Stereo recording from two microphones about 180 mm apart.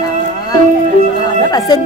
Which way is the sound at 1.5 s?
20° left (ahead or behind).